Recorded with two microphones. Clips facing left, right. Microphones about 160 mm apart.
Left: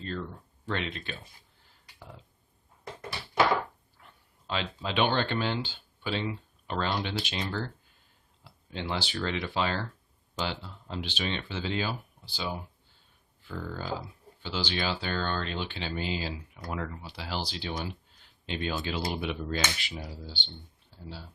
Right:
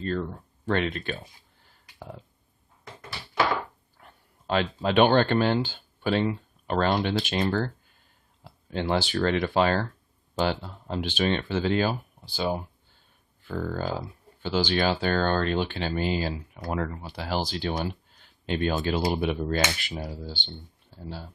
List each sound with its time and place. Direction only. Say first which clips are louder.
0.0 s speech: right 7 dB; 50° right (ahead or behind)
2.0 s burping: right 7 dB; 50° right (ahead or behind)
4.0 s speech: right 7 dB; 50° right (ahead or behind)